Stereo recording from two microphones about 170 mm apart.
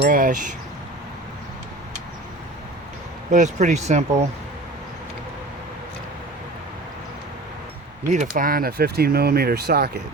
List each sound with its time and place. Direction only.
0.0 s speech: 50° right (ahead or behind)
3.3 s speech: 45° right (ahead or behind)
8.1 s speech: 50° right (ahead or behind); by 10.0 s 70° right (ahead or behind)